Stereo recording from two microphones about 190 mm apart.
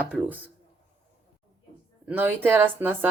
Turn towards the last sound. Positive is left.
turn(degrees=-10)  # may be behind; listen again after turning